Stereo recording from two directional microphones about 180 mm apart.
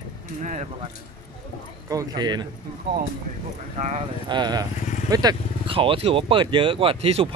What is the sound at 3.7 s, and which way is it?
Speech, 40° right (ahead or behind).